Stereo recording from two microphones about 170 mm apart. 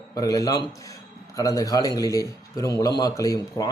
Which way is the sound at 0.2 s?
20° left (ahead or behind).